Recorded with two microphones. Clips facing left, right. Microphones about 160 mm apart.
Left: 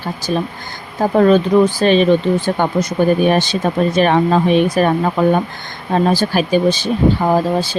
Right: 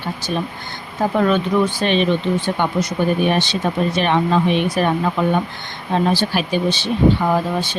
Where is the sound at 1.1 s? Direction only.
40° left (ahead or behind).